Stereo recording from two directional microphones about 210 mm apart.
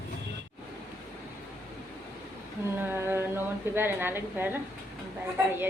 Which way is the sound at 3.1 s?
10° right (ahead or behind).